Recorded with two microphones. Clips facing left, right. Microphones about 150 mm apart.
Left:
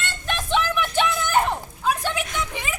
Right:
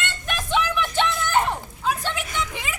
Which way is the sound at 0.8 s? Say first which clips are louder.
Left 1 dB; 5° left (ahead or behind).